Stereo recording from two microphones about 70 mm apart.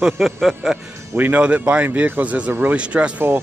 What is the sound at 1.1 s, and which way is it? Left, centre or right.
Speech, right.